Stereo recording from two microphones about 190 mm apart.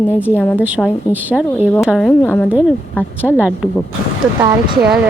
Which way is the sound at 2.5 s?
5° right (ahead or behind).